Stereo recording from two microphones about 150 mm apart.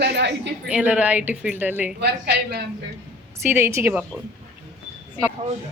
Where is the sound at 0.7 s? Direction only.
10° right (ahead or behind).